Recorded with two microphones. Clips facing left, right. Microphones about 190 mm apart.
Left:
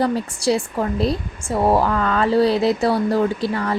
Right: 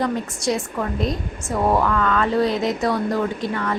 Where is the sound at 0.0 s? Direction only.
30° left (ahead or behind).